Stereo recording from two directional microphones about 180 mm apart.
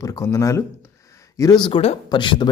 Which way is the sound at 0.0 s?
20° left (ahead or behind).